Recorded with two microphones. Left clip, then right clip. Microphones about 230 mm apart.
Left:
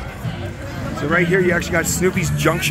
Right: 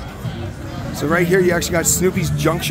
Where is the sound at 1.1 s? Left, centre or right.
Centre.